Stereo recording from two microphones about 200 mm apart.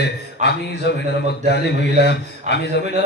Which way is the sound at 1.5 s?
55° left (ahead or behind).